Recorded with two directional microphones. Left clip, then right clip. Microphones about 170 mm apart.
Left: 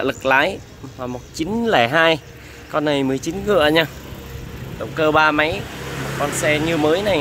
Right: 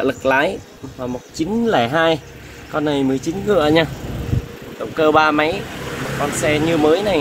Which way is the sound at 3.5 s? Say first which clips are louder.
Even; centre (ahead or behind).